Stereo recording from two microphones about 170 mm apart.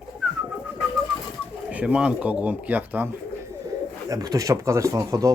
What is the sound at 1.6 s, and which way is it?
Speech, 5° right (ahead or behind).